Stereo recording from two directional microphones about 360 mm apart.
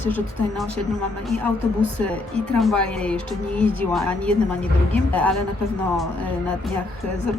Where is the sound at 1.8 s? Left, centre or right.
Centre.